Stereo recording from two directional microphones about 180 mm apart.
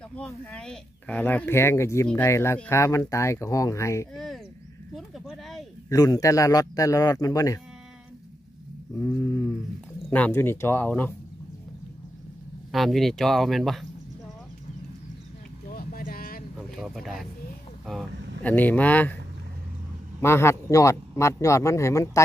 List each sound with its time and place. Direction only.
0.1 s speech: 5° left (ahead or behind)
4.1 s speech: centre (ahead or behind)
5.9 s a man's voice: 20° left (ahead or behind)
10.0 s speech: 10° left (ahead or behind)
12.7 s speech: centre (ahead or behind)
15.7 s a sound: 55° left (ahead or behind)
16.5 s a sound: centre (ahead or behind)
18.4 s speech: 10° left (ahead or behind)
20.2 s speech: 15° left (ahead or behind)